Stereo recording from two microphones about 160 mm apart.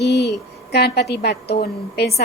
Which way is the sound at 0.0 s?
90° left.